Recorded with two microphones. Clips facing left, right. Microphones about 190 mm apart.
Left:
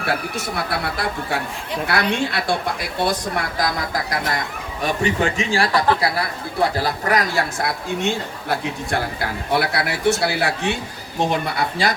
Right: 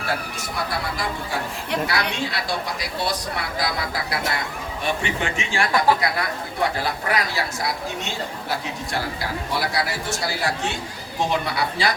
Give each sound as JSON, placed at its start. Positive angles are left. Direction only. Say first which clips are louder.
{"t": 0.0, "sound": "a man's voice", "louder": "left 4 dB", "side_deg": 65}